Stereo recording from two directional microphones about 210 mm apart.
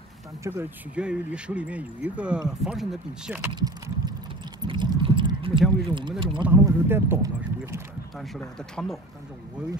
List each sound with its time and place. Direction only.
0.4 s speech: 10° right (ahead or behind)
3.5 s a sound: 20° right (ahead or behind)
5.9 s speech: 25° right (ahead or behind)
6.4 s speech: 10° right (ahead or behind)
8.4 s speech: 5° left (ahead or behind)